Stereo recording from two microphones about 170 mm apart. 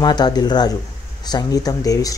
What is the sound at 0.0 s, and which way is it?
Speech, 25° left (ahead or behind).